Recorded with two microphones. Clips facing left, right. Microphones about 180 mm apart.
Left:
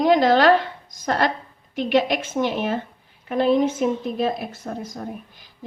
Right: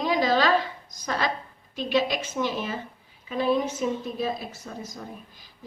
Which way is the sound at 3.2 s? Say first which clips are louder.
Left 6 dB; 60° left (ahead or behind).